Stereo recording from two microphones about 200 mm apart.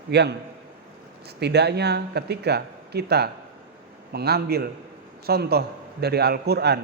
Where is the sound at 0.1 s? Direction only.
55° right (ahead or behind).